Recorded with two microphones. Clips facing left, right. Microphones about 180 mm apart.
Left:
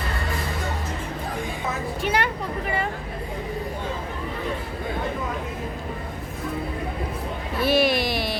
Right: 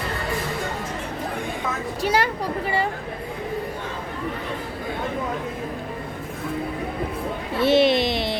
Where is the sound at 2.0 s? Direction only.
35° right (ahead or behind).